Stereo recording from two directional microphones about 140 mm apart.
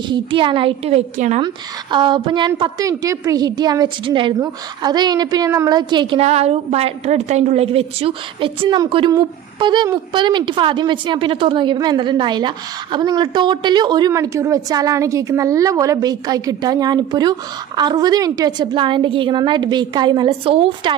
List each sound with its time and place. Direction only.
0.1 s a woman's voice: 35° right (ahead or behind)
1.9 s a woman's voice: 35° right (ahead or behind)
2.8 s a woman's voice: 25° right (ahead or behind)
6.1 s a woman's voice: 50° right (ahead or behind); by 14.1 s 30° right (ahead or behind)
14.1 s a woman's voice: 20° right (ahead or behind); by 20.9 s 40° right (ahead or behind)